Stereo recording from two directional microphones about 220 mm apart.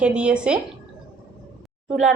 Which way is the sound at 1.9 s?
5° right (ahead or behind).